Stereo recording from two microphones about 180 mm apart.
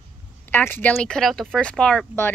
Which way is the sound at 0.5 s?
10° left (ahead or behind).